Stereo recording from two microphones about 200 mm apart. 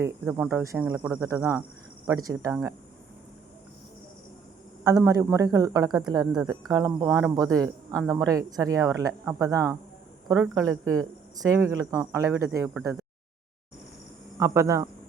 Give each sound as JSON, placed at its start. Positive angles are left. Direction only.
{"t": 0.0, "sound": "speech", "side_deg": -10}
{"t": 4.8, "sound": "speech", "side_deg": -15}
{"t": 14.3, "sound": "speech", "side_deg": -15}